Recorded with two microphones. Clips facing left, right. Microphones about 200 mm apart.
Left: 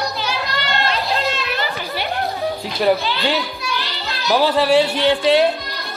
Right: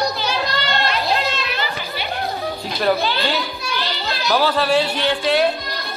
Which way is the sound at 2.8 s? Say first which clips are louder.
Left 2 dB; 15° left (ahead or behind).